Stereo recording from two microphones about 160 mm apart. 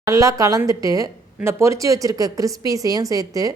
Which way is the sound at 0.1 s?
20° right (ahead or behind).